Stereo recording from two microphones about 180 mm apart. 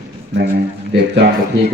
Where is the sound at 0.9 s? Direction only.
70° right (ahead or behind).